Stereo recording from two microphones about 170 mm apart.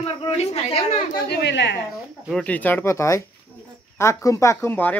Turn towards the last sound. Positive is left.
turn(degrees=10)  # may be behind; listen again after turning